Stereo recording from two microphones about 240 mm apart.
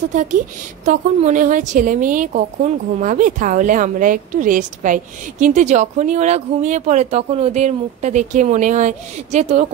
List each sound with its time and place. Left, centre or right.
0.1 s a woman's voice: right